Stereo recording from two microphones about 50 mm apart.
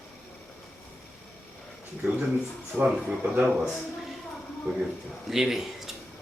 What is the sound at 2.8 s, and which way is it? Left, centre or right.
Speech, right.